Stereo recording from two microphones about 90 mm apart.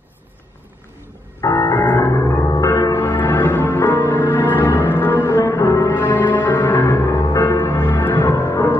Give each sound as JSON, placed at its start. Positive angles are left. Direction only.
{"t": 1.4, "sound": "music", "side_deg": 40}
{"t": 1.8, "sound": "music", "side_deg": 25}
{"t": 2.5, "sound": "a sound", "side_deg": 40}
{"t": 3.2, "sound": "music", "side_deg": 25}
{"t": 5.3, "sound": "music", "side_deg": 35}
{"t": 8.3, "sound": "music", "side_deg": 35}